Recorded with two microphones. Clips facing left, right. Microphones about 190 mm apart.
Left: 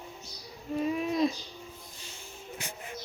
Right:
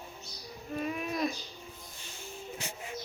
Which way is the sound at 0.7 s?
25° left (ahead or behind).